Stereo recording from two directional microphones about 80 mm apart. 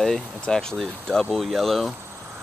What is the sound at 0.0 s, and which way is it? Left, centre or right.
Speech, centre.